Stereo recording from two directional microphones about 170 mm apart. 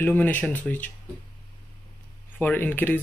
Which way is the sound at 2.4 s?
10° left (ahead or behind).